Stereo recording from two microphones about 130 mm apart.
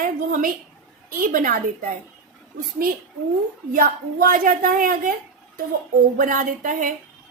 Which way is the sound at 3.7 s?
90° right.